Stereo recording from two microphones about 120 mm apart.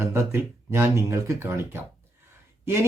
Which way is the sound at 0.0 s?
20° right (ahead or behind).